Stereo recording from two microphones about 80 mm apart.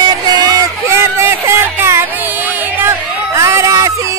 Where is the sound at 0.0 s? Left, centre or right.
Right.